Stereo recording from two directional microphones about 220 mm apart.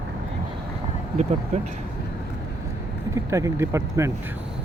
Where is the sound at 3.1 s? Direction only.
15° right (ahead or behind).